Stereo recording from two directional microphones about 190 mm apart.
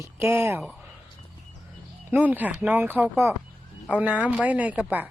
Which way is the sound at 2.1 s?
10° right (ahead or behind).